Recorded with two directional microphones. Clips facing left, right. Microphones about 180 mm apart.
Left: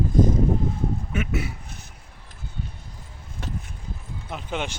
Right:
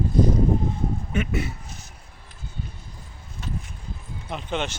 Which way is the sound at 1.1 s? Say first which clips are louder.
Right 1 dB; 5° left (ahead or behind).